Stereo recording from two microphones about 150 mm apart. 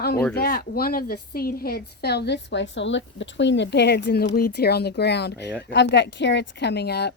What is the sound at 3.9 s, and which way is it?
A woman's voice, 90° left.